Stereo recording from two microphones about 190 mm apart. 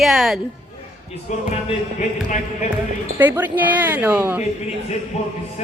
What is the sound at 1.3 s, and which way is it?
Speech, 40° left (ahead or behind).